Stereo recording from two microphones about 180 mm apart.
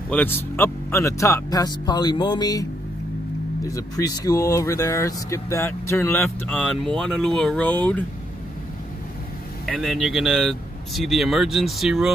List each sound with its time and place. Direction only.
0.1 s speech: 10° left (ahead or behind)
3.6 s speech: 20° left (ahead or behind)
9.7 s speech: centre (ahead or behind)